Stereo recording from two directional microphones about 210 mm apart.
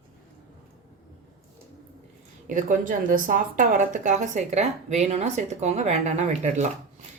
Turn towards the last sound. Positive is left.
turn(degrees=-35)  # may be behind; listen again after turning